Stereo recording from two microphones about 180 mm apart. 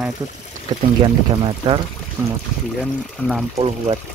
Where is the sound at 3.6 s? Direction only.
35° right (ahead or behind).